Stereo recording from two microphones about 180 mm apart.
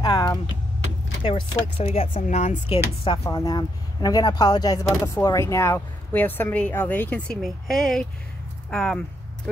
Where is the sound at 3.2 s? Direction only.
20° left (ahead or behind).